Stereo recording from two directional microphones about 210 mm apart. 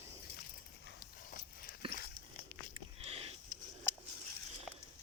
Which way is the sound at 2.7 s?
30° right (ahead or behind).